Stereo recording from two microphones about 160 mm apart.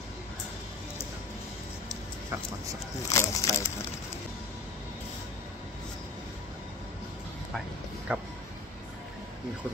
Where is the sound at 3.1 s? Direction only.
20° left (ahead or behind).